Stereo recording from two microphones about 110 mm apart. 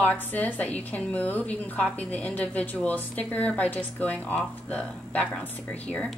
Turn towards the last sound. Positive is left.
turn(degrees=10)  # may be behind; listen again after turning